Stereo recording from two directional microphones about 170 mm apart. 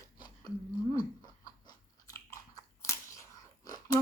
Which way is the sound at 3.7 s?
20° left (ahead or behind).